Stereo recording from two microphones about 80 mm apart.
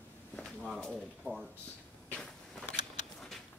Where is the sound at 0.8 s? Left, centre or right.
Centre.